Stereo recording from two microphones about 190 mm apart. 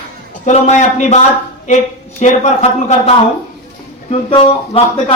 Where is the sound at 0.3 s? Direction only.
40° left (ahead or behind).